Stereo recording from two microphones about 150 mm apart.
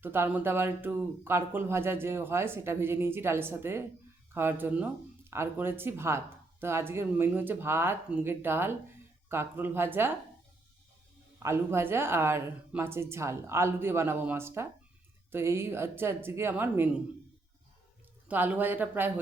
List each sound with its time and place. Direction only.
0.0 s speech: 15° right (ahead or behind)
11.4 s speech: 15° right (ahead or behind)
18.3 s speech: 10° right (ahead or behind)